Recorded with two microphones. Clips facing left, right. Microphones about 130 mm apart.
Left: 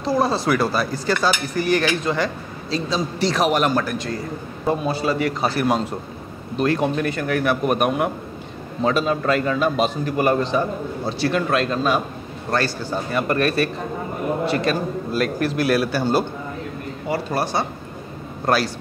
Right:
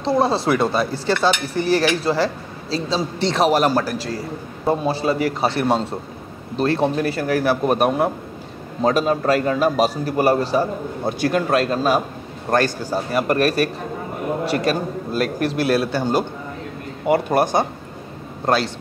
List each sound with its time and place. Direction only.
0.0 s speech: 25° right (ahead or behind)
0.5 s cutlery: 25° right (ahead or behind)
6.5 s a man's voice: 30° right (ahead or behind)
11.1 s a man's voice: 45° right (ahead or behind)
15.4 s a man's voice: 30° right (ahead or behind)
16.0 s a man's voice: 15° right (ahead or behind)
17.1 s speech: 50° right (ahead or behind)
18.4 s a man's voice: 25° right (ahead or behind)